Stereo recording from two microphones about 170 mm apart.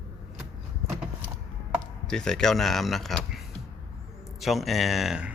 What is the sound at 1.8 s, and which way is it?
A man's voice, 5° left (ahead or behind).